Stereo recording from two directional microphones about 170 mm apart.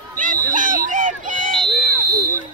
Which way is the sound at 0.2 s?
50° right (ahead or behind).